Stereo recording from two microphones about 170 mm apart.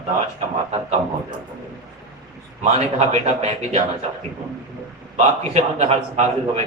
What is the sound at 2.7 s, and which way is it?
A man's voice, 40° right (ahead or behind).